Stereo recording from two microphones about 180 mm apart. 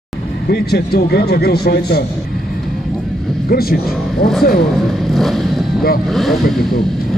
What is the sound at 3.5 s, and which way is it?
Speech, 55° left (ahead or behind).